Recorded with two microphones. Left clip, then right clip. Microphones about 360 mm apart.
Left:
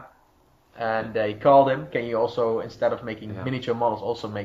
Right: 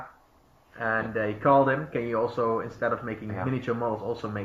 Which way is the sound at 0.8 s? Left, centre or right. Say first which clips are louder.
Left 3 dB; left.